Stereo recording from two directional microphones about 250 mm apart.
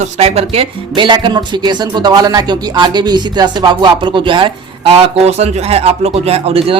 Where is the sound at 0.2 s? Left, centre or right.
Right.